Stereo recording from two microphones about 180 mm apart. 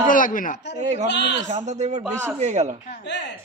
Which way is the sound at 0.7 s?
40° right (ahead or behind).